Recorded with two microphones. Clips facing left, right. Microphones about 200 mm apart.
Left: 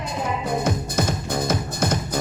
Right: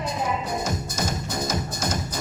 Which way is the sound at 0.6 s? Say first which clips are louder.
Left 5 dB; 55° left (ahead or behind).